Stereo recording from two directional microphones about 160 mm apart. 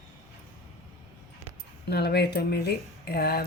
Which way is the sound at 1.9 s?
90° left.